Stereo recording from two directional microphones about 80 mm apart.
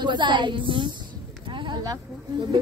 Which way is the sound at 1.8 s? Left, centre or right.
Right.